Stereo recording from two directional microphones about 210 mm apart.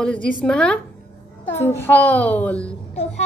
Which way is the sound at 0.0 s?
5° left (ahead or behind).